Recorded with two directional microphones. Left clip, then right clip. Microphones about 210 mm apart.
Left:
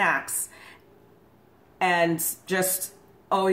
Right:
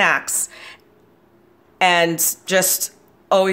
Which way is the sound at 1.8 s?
40° right (ahead or behind).